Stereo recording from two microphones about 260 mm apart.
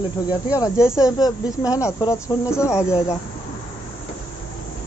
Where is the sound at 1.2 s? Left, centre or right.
Centre.